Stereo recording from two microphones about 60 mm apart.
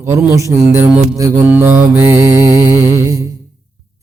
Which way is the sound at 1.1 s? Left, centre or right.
Right.